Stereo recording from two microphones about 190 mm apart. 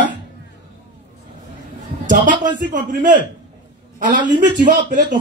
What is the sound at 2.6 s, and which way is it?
Speech, 45° right (ahead or behind).